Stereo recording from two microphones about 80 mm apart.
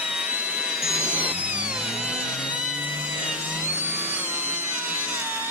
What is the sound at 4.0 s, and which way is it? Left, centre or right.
Wood, right.